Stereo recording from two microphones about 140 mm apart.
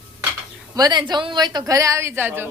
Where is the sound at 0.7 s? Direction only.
30° right (ahead or behind).